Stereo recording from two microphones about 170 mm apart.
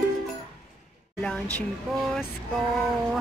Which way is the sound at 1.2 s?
5° left (ahead or behind).